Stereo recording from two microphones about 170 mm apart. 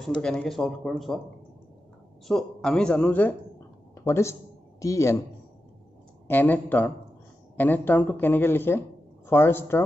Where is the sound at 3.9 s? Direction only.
15° left (ahead or behind).